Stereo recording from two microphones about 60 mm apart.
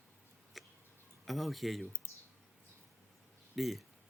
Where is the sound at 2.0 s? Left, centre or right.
Right.